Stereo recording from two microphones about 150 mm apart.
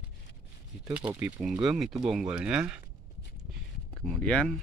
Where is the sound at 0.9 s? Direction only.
10° right (ahead or behind).